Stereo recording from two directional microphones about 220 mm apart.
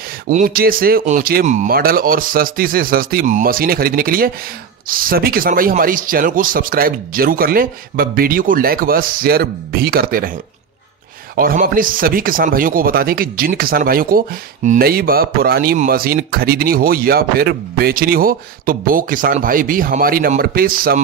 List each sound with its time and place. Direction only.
0.3 s speech: 40° right (ahead or behind)
11.3 s speech: 40° right (ahead or behind)